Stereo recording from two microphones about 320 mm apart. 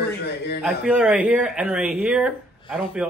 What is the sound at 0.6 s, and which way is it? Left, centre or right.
Speech, centre.